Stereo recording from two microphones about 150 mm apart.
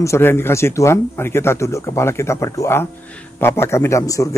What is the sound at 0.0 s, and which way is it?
A man's voice, 15° left (ahead or behind).